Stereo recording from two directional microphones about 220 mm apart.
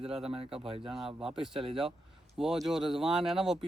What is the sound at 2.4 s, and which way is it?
A man's voice, centre (ahead or behind).